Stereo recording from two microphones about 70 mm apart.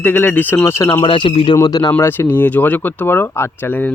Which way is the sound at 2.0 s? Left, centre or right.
Left.